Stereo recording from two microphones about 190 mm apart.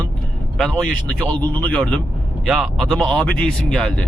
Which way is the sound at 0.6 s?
5° left (ahead or behind).